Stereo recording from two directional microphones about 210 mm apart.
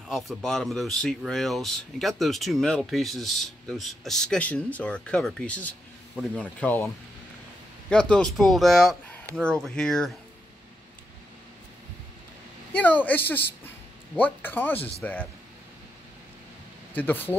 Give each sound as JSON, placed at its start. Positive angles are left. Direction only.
{"t": 0.3, "sound": "speech", "side_deg": 0}
{"t": 7.9, "sound": "speech", "side_deg": 5}
{"t": 12.7, "sound": "speech", "side_deg": 10}
{"t": 16.9, "sound": "speech", "side_deg": 10}